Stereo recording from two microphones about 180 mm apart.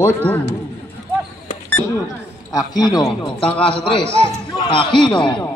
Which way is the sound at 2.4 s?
20° left (ahead or behind).